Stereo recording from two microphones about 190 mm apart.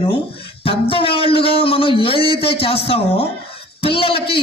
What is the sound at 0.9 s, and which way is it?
A man's voice, 30° left (ahead or behind).